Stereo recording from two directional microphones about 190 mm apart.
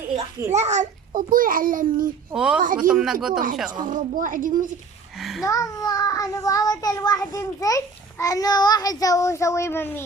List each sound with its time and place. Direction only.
0.5 s a child's voice: 40° right (ahead or behind)
2.3 s speech: 5° right (ahead or behind)
3.3 s a child's voice: 45° right (ahead or behind)
5.1 s speech: centre (ahead or behind)
5.5 s a child's voice: 20° left (ahead or behind)